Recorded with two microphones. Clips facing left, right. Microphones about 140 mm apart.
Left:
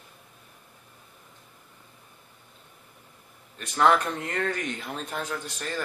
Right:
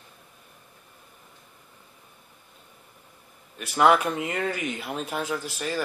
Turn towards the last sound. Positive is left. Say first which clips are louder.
# right 4 dB
turn(degrees=-5)  # may be behind; listen again after turning